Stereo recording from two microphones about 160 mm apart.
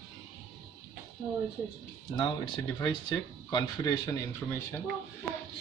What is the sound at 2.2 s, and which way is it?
Speech, 30° left (ahead or behind).